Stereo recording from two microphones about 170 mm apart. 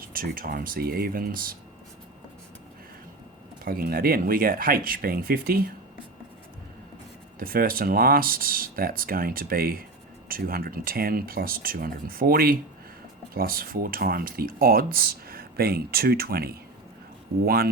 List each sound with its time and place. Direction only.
0.1 s speech: 60° right (ahead or behind)
3.6 s speech: 60° right (ahead or behind)
7.3 s speech: 60° right (ahead or behind)